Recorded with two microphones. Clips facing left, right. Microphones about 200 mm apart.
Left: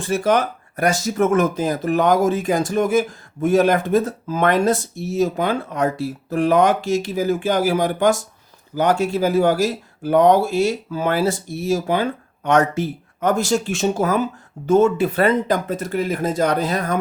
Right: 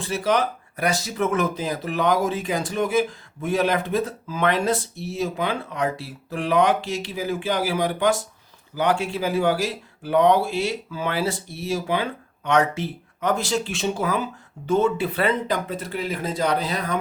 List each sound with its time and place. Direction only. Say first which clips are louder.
0.0 s speech: left 4 dB; 45° left (ahead or behind)